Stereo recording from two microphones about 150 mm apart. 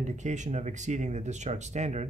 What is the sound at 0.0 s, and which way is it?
Speech, 50° right (ahead or behind).